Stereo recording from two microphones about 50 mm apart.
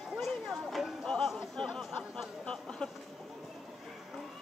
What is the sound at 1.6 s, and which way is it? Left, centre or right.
Chatter, centre.